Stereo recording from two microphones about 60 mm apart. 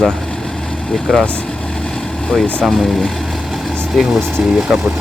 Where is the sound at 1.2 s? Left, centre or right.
Centre.